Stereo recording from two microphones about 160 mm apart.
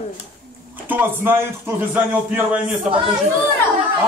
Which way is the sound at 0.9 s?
15° right (ahead or behind).